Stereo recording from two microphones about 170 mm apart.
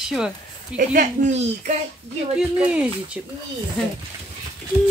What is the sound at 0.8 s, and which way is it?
Speech, 50° right (ahead or behind).